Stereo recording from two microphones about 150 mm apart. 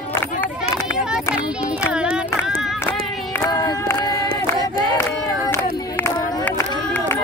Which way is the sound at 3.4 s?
25° left (ahead or behind).